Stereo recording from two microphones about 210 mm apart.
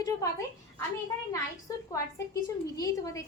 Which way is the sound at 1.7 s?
15° left (ahead or behind).